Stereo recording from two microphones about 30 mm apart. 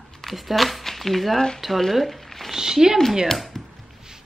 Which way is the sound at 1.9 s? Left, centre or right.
Centre.